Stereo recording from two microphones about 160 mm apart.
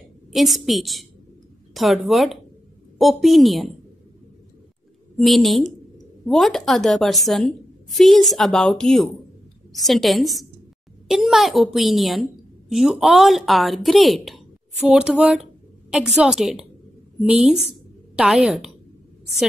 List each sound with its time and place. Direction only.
0.3 s a woman's voice: centre (ahead or behind)
5.1 s a woman's voice: centre (ahead or behind)